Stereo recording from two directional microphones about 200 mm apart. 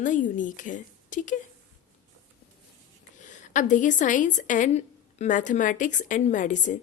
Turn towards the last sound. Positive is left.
turn(degrees=40)  # may be behind; listen again after turning